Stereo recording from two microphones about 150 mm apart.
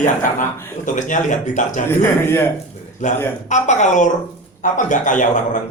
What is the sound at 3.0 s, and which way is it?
A man's voice, 55° left (ahead or behind).